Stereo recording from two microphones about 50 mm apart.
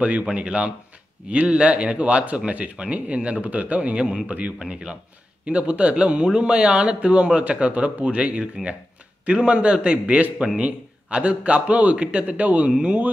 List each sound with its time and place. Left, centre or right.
0.0 s a man's voice: right